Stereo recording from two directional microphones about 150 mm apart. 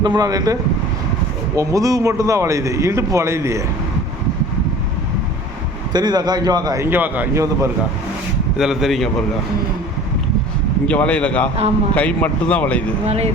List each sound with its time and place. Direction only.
0.0 s a man's voice: 25° right (ahead or behind)
1.5 s a man's voice: 20° right (ahead or behind)
5.9 s a man's voice: 30° right (ahead or behind)
8.5 s speech: 5° right (ahead or behind)
10.8 s speech: 10° left (ahead or behind)
13.1 s speech: 45° right (ahead or behind)